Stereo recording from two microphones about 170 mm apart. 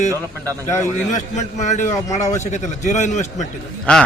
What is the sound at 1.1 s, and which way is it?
A man's voice, 45° left (ahead or behind).